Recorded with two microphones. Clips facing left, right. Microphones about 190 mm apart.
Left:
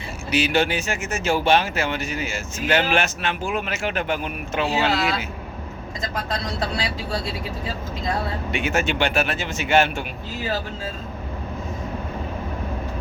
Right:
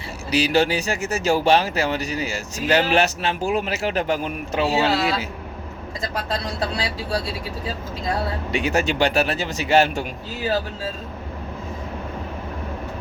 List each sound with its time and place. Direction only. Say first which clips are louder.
0.3 s speech: right 2 dB; 35° right (ahead or behind)
8.4 s speech: right 2 dB; 35° right (ahead or behind)